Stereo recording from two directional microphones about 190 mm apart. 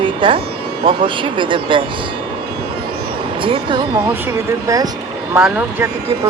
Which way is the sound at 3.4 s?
25° right (ahead or behind).